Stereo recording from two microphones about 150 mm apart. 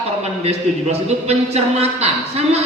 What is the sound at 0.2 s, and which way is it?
A man's voice, 45° right (ahead or behind).